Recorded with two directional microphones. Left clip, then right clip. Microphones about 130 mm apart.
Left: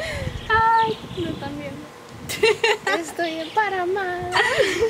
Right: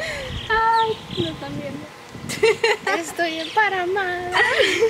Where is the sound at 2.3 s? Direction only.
15° left (ahead or behind).